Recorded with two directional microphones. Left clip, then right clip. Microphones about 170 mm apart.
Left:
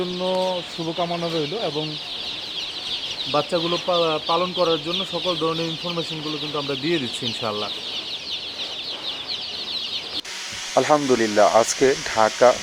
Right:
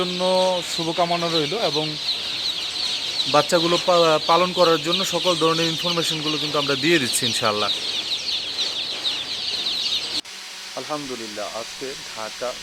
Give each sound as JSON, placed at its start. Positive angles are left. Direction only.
{"t": 0.0, "sound": "speech", "side_deg": -5}
{"t": 3.3, "sound": "speech", "side_deg": -20}
{"t": 10.8, "sound": "speech", "side_deg": 35}